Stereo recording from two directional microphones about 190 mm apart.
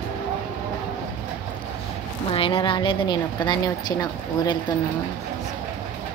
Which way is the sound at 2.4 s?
30° left (ahead or behind).